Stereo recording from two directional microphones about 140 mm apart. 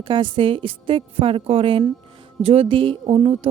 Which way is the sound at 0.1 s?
35° right (ahead or behind).